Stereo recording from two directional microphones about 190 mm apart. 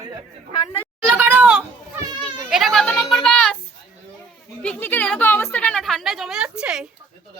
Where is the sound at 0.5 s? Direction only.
20° left (ahead or behind).